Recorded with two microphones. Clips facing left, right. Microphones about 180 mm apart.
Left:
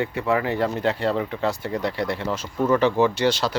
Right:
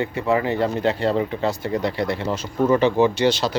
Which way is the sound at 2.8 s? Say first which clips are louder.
Right 2 dB; 20° right (ahead or behind).